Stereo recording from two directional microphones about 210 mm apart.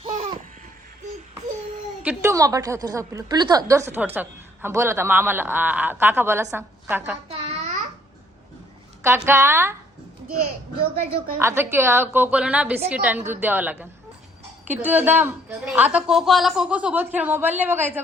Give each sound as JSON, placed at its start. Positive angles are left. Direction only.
{"t": 0.0, "sound": "a sound", "side_deg": -25}
{"t": 2.0, "sound": "a woman's voice", "side_deg": -15}
{"t": 7.3, "sound": "babbling", "side_deg": -35}
{"t": 9.0, "sound": "a woman's voice", "side_deg": -10}
{"t": 11.3, "sound": "a woman's voice", "side_deg": -10}